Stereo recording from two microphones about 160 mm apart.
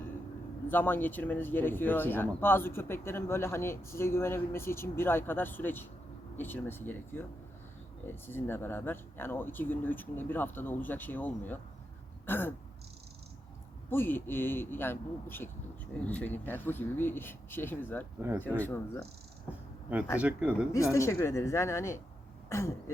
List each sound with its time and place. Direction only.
0.7 s speech: 15° left (ahead or behind)
12.2 s throat clearing: 15° left (ahead or behind)
13.9 s speech: 15° left (ahead or behind)
20.1 s speech: 10° right (ahead or behind)
20.7 s speech: 20° left (ahead or behind)
22.4 s throat clearing: 20° left (ahead or behind)